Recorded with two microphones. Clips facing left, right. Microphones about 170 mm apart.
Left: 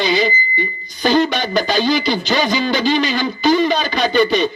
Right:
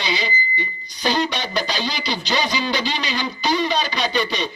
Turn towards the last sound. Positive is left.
turn(degrees=50)  # may be behind; listen again after turning